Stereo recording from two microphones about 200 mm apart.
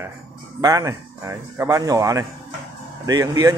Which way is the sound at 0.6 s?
15° right (ahead or behind).